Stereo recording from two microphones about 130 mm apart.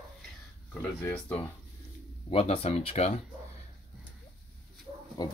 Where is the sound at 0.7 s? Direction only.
15° left (ahead or behind).